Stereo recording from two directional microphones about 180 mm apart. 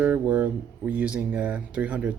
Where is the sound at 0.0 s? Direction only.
5° right (ahead or behind).